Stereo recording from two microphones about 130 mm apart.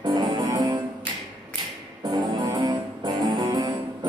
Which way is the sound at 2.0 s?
35° right (ahead or behind).